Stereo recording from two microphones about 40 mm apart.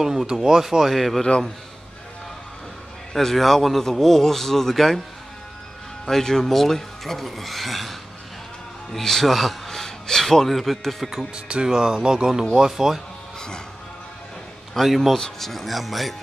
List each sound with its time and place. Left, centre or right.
0.0 s speech: centre
0.9 s speech: centre
1.2 s a man's voice: centre
3.1 s a man's voice: centre
6.0 s speech: centre
8.9 s a man's voice: centre
11.3 s speech: right; by 13.0 s centre
14.7 s speech: centre
15.1 s speech: centre